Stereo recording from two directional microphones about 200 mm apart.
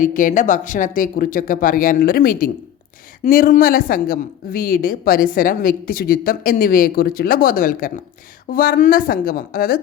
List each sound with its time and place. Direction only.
0.0 s a woman's voice: 40° left (ahead or behind)